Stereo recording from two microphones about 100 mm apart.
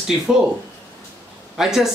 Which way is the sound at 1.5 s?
5° right (ahead or behind).